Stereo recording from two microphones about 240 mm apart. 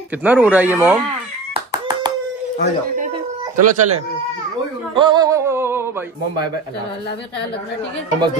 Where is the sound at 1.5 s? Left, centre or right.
Centre.